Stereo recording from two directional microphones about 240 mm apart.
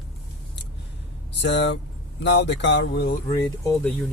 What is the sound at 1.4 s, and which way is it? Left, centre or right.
Speech, left.